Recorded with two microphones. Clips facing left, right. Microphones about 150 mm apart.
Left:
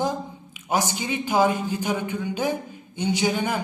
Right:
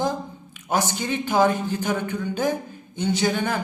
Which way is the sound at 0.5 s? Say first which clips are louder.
Right 1 dB; 10° left (ahead or behind).